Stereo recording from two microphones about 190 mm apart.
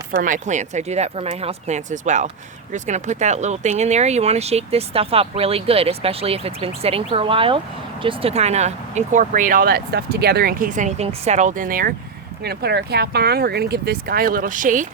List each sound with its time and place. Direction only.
0.1 s speech: 45° right (ahead or behind)